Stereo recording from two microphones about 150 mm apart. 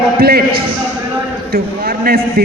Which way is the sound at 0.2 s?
90° right.